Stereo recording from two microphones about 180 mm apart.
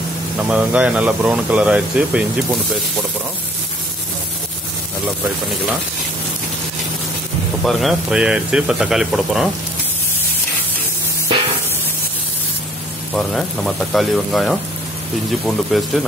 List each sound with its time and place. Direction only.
0.4 s speech: 5° right (ahead or behind)
7.6 s speech: centre (ahead or behind)
13.1 s speech: centre (ahead or behind)